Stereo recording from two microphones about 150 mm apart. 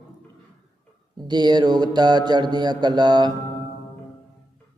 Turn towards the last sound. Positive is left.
turn(degrees=-30)  # may be behind; listen again after turning